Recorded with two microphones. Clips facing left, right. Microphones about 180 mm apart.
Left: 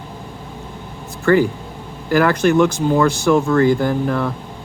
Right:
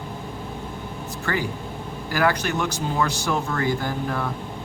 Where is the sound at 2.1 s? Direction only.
50° left (ahead or behind).